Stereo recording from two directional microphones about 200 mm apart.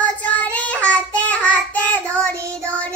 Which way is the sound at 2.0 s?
10° right (ahead or behind).